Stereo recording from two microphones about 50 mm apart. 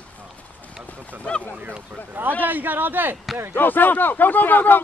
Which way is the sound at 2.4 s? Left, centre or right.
Right.